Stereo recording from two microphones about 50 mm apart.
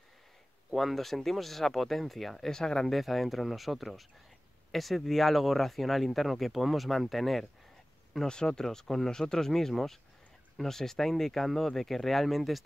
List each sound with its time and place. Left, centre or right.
0.7 s speech: centre
3.0 s speech: centre
8.3 s speech: centre